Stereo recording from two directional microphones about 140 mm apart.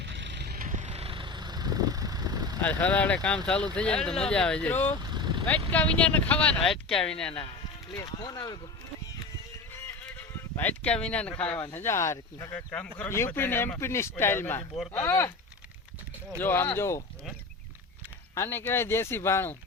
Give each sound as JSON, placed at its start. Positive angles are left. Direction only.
{"t": 0.5, "sound": "vehicle", "side_deg": -70}
{"t": 2.6, "sound": "speech", "side_deg": 10}
{"t": 5.0, "sound": "vehicle", "side_deg": -30}
{"t": 5.5, "sound": "speech", "side_deg": 10}
{"t": 8.0, "sound": "speech", "side_deg": 30}
{"t": 10.1, "sound": "speech", "side_deg": 10}
{"t": 16.4, "sound": "speech", "side_deg": 15}
{"t": 18.3, "sound": "speech", "side_deg": 15}